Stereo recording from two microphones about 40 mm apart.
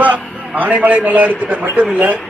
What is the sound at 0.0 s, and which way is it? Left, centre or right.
A man's voice, right.